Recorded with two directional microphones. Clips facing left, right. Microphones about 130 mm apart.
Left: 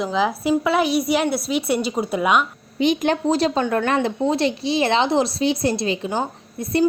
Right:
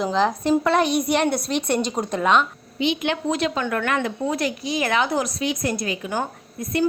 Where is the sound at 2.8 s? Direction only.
40° left (ahead or behind).